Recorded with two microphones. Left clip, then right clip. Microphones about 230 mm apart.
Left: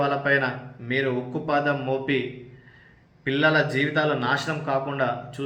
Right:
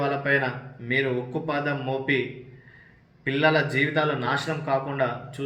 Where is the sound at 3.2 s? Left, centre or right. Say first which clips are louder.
Left 1 dB; centre.